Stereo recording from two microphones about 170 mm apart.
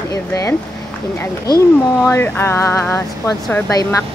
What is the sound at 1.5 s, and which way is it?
A woman's voice, 15° left (ahead or behind).